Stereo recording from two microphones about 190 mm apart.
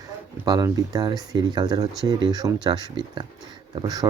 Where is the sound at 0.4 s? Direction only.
20° right (ahead or behind).